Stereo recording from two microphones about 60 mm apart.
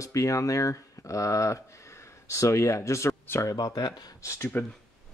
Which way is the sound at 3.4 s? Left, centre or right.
Left.